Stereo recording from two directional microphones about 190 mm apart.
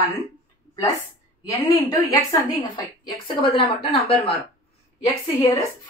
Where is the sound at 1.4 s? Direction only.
15° left (ahead or behind).